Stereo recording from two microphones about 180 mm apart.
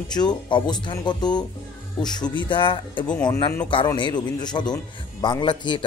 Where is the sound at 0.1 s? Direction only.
25° left (ahead or behind).